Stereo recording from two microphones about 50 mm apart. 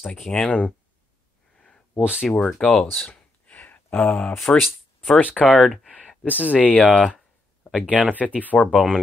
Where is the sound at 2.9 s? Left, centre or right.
Left.